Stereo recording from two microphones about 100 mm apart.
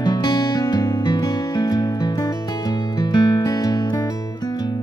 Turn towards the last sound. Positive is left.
turn(degrees=40)  # may be behind; listen again after turning